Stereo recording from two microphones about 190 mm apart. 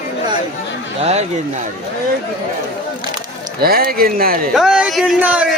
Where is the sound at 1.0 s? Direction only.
35° right (ahead or behind).